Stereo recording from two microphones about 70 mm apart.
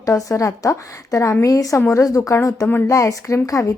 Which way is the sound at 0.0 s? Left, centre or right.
Left.